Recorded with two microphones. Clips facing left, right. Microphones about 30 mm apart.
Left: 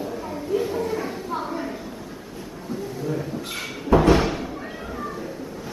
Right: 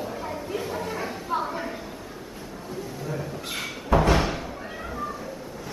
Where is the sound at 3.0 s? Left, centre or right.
Centre.